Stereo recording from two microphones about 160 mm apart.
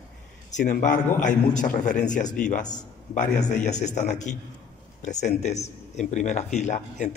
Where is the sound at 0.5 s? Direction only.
50° left (ahead or behind).